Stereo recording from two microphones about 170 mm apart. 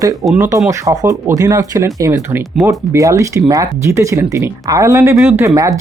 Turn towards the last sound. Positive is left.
turn(degrees=-20)  # may be behind; listen again after turning